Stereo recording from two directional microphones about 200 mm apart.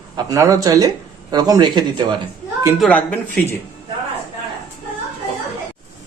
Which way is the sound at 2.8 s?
5° left (ahead or behind).